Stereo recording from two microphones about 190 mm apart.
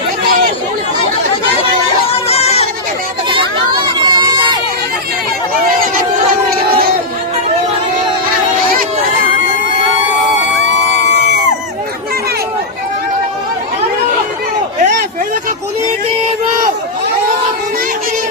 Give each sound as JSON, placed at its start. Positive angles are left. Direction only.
{"t": 2.2, "sound": "crowd", "side_deg": 35}
{"t": 3.9, "sound": "crowd", "side_deg": -25}